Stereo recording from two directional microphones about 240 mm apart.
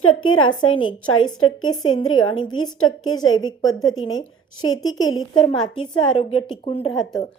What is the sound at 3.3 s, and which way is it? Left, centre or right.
Speech, left.